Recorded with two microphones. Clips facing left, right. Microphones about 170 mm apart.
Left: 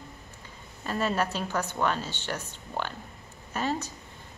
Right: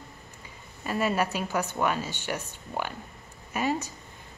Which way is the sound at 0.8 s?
10° right (ahead or behind).